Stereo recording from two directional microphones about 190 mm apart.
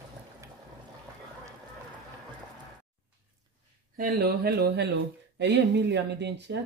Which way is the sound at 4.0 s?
55° right (ahead or behind).